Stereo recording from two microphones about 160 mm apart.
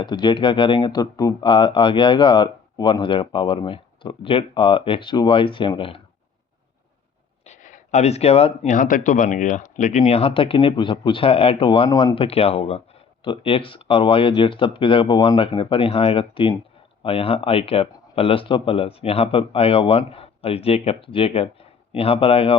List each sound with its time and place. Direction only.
0.0 s speech: 30° left (ahead or behind)
7.4 s a sound: 50° left (ahead or behind)
8.7 s speech: 55° left (ahead or behind); by 11.9 s 35° left (ahead or behind)
11.9 s speech: 20° left (ahead or behind)
12.1 s speech: 35° left (ahead or behind)